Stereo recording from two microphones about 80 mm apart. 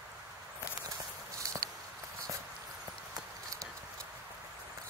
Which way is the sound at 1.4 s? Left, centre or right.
Right.